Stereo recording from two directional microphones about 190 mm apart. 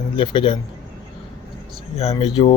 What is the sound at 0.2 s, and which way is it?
Speech, 25° left (ahead or behind).